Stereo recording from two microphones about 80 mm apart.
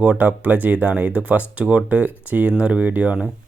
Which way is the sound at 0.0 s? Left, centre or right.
Centre.